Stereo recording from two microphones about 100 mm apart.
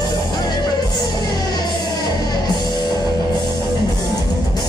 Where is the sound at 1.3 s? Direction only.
40° left (ahead or behind).